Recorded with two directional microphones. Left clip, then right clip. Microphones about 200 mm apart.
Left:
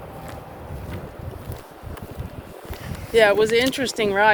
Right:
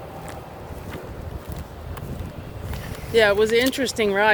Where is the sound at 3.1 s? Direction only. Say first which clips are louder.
Left 1 dB; 30° left (ahead or behind).